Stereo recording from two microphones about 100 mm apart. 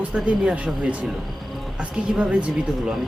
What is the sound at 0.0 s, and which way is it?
Speech, 10° right (ahead or behind).